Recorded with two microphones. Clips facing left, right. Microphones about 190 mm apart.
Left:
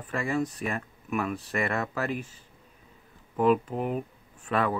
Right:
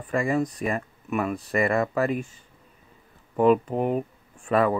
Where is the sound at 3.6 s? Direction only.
40° right (ahead or behind).